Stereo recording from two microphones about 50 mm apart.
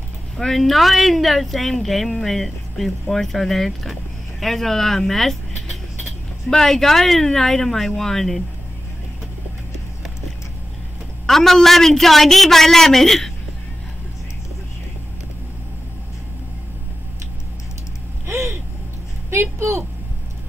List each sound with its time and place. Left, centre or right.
0.4 s a man's voice: centre
11.2 s a man's voice: centre
18.2 s a sound: right